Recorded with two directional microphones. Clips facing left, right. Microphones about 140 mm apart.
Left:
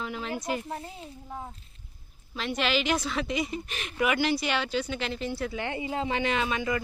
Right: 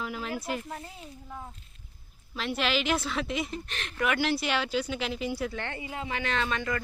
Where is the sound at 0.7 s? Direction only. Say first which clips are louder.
Left 3 dB; 25° left (ahead or behind).